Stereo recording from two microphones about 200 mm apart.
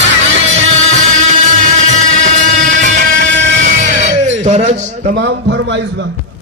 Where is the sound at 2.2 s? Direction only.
40° right (ahead or behind).